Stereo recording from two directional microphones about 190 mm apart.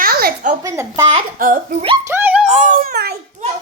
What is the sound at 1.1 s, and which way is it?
Speech, 45° right (ahead or behind).